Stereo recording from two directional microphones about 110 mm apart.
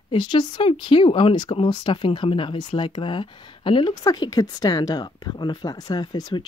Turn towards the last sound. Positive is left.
turn(degrees=40)  # may be behind; listen again after turning